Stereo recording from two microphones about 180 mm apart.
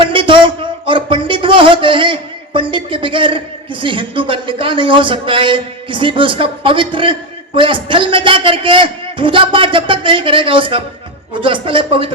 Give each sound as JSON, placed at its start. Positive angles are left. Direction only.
{"t": 0.0, "sound": "a man's voice", "side_deg": -30}